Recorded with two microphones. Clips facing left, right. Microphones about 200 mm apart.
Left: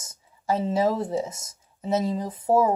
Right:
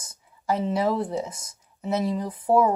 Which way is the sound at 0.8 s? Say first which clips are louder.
Left 1 dB; 40° left (ahead or behind).